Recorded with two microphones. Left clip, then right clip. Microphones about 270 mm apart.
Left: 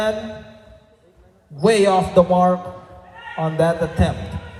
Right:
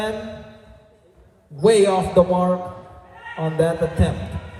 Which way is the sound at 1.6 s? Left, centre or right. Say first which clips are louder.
Even; left.